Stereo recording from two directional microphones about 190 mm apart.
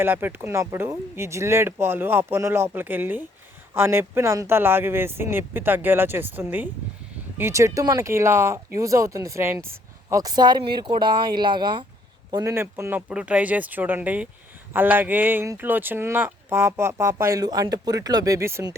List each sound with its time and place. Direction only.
0.0 s speech: 10° right (ahead or behind)